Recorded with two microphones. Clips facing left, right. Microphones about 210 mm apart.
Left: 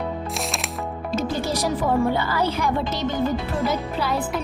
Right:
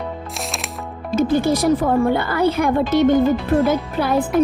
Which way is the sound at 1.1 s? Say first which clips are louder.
Right 8 dB; 55° right (ahead or behind).